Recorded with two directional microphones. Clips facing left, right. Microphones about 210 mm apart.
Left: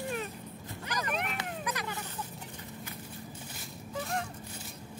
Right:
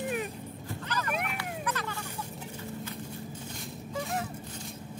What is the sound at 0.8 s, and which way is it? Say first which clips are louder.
Dog: right 1 dB; 15° left (ahead or behind).